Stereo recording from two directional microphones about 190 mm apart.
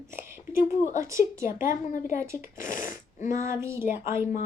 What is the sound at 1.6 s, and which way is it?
Speech, 45° left (ahead or behind).